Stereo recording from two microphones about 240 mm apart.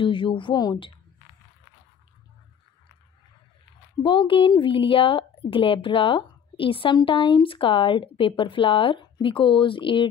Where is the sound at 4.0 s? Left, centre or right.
Left.